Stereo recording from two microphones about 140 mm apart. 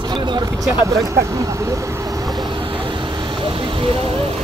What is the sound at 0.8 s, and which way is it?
Vehicle, 25° right (ahead or behind).